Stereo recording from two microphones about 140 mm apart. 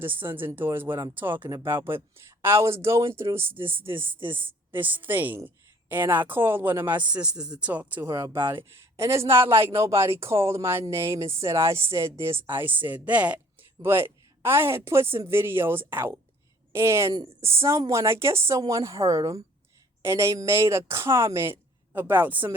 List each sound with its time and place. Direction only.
0.0 s a man's voice: 15° right (ahead or behind)